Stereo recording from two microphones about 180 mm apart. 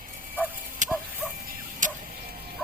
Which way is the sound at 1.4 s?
45° right (ahead or behind).